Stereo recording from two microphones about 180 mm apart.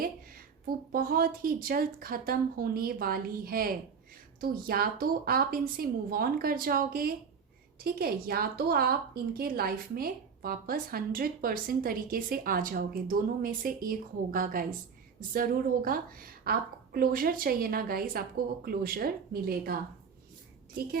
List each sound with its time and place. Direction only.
0.9 s a woman's voice: 55° right (ahead or behind)